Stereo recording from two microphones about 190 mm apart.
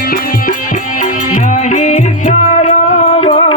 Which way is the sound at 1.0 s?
40° left (ahead or behind).